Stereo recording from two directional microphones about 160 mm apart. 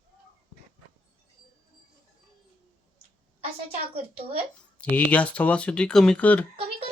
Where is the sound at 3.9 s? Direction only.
40° right (ahead or behind).